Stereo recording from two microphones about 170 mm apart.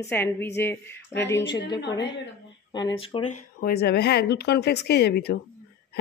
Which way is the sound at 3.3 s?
55° left (ahead or behind).